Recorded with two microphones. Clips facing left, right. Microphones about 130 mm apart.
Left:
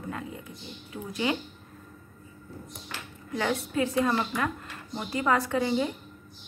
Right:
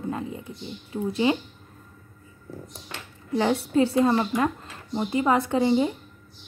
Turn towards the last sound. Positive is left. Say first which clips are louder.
# right 5 dB
turn(degrees=-25)  # may be behind; listen again after turning